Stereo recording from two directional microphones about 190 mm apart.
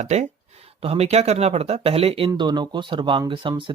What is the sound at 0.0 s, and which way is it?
Speech, 35° right (ahead or behind).